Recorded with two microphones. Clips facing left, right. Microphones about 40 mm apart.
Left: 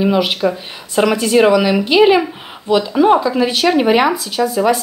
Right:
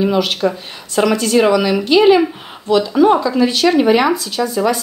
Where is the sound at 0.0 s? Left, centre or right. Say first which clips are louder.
Left 1 dB; centre.